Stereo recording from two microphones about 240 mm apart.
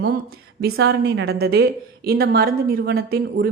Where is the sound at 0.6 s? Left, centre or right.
Right.